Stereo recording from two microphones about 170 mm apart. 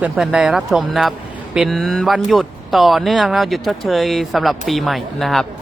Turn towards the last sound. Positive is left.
turn(degrees=0)  # may be behind; listen again after turning